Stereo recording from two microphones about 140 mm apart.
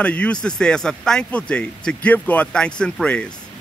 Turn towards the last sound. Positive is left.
turn(degrees=5)  # may be behind; listen again after turning